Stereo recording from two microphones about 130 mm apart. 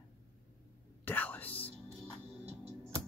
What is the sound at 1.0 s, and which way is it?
Whispering, 15° left (ahead or behind).